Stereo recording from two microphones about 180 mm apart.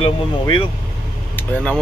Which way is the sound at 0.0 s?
25° left (ahead or behind).